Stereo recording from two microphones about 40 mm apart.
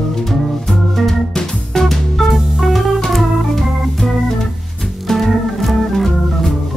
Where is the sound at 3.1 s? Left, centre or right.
Centre.